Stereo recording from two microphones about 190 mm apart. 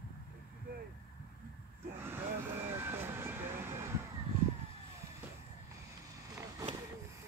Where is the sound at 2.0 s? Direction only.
10° right (ahead or behind).